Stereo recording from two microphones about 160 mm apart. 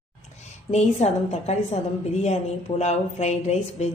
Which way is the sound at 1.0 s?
45° left (ahead or behind).